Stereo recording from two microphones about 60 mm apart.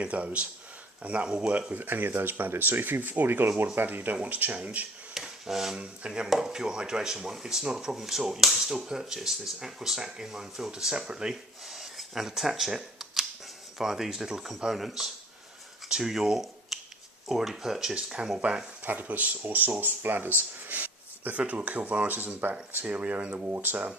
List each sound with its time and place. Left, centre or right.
0.0 s speech: right
1.7 s speech: right
5.1 s a sound: centre
5.7 s speech: centre
11.6 s camera: centre
13.7 s speech: centre
18.9 s speech: right